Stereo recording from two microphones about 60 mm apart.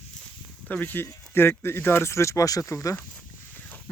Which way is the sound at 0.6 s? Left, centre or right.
Left.